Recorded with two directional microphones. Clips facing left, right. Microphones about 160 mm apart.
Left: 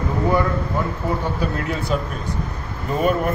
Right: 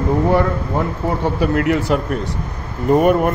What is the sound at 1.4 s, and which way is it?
Speech, 85° right.